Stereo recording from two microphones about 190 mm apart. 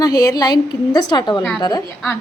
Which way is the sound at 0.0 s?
20° left (ahead or behind).